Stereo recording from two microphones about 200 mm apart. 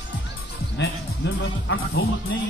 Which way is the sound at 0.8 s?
70° left (ahead or behind).